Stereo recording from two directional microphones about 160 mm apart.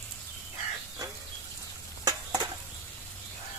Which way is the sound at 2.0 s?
20° right (ahead or behind).